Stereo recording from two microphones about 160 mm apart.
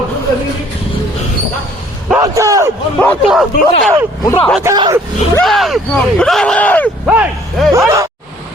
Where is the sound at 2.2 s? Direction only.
20° right (ahead or behind).